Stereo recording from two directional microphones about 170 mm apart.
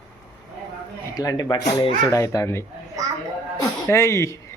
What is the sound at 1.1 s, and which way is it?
Speech, 20° left (ahead or behind).